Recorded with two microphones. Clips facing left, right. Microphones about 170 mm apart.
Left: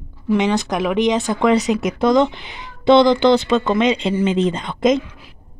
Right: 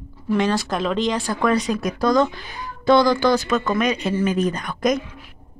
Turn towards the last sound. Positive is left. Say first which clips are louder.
# left 4 dB
turn(degrees=25)  # may be behind; listen again after turning